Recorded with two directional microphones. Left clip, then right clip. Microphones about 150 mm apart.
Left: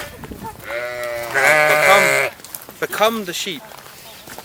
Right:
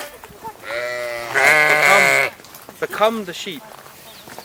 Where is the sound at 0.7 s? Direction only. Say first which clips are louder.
Even; 15° left (ahead or behind).